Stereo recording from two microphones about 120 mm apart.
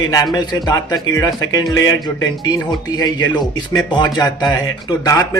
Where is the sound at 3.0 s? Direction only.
35° left (ahead or behind).